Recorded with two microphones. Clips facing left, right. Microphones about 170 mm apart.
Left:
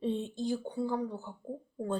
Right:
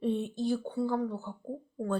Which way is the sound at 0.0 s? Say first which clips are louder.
Right 2 dB; 20° left (ahead or behind).